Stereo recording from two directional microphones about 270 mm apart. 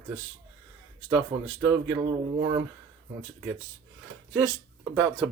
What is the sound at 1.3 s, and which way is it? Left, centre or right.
Speech, right.